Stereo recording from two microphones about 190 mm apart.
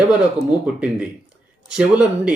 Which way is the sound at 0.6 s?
5° right (ahead or behind).